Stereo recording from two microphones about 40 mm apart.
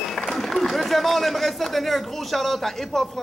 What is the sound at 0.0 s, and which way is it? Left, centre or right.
A man's voice, centre.